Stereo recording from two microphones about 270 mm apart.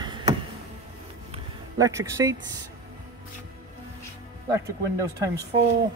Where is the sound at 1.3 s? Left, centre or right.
Centre.